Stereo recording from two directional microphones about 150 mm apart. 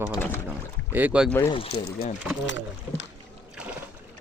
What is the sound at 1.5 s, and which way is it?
Speech, 40° left (ahead or behind).